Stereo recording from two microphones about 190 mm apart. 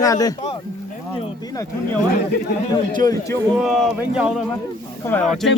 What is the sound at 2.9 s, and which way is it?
Speech, 20° left (ahead or behind).